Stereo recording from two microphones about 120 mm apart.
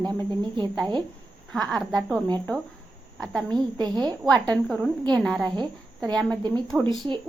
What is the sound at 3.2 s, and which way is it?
Speech, 5° left (ahead or behind).